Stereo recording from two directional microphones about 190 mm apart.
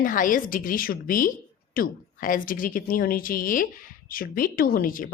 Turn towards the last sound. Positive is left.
turn(degrees=45)  # may be behind; listen again after turning